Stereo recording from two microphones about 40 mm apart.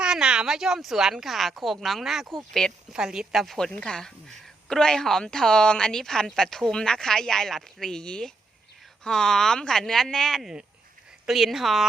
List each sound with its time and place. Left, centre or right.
0.0 s a sound: right
0.4 s speech: centre
2.3 s speech: centre
2.9 s a woman's voice: centre
3.3 s speech: centre
3.7 s speech: left
11.3 s speech: centre